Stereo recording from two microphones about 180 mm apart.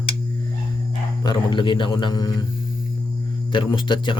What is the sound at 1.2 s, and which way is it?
Speech, 25° left (ahead or behind).